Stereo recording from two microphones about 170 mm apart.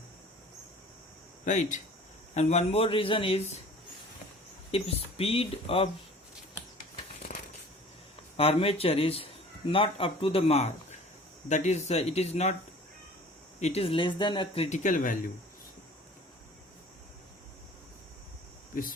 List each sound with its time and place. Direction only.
1.5 s speech: 45° left (ahead or behind)
4.7 s speech: 35° left (ahead or behind)
7.3 s a sound: 45° left (ahead or behind)
8.4 s speech: 35° left (ahead or behind)
13.6 s speech: 40° left (ahead or behind)
18.7 s a sound: 55° left (ahead or behind)